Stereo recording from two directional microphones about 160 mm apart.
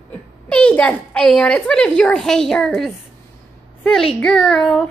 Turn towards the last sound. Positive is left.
turn(degrees=5)  # may be behind; listen again after turning